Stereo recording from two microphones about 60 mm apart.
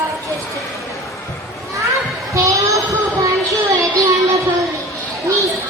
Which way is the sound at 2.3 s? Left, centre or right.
Right.